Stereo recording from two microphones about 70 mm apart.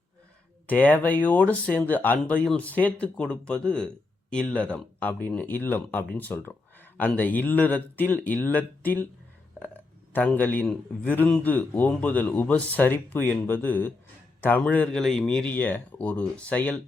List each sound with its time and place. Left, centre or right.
0.7 s speech: left
10.1 s speech: left
14.9 s speech: centre
15.4 s speech: left